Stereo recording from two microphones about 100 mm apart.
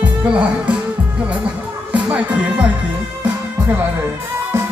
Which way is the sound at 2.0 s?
10° right (ahead or behind).